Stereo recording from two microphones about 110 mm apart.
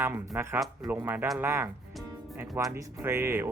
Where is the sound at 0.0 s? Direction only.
20° right (ahead or behind).